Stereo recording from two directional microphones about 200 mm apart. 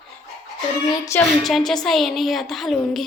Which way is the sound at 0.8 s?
15° left (ahead or behind).